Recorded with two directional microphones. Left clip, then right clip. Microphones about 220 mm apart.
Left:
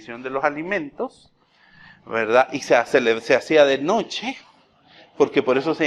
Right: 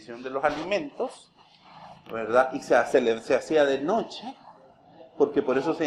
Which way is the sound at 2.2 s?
40° left (ahead or behind).